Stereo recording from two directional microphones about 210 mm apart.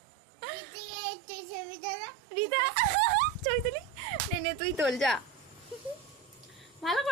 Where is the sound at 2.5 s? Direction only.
40° right (ahead or behind).